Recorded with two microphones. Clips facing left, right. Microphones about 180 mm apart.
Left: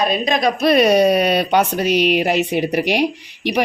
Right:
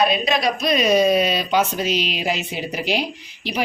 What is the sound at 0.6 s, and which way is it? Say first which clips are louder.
A woman's voice: left 5 dB; 65° left (ahead or behind).